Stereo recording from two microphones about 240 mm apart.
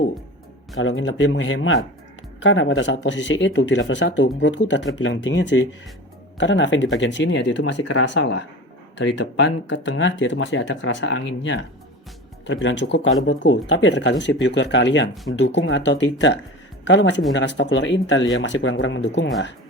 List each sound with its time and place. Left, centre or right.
0.8 s speech: left